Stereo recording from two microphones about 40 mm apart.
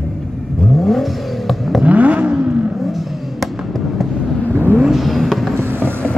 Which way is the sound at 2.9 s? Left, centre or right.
Centre.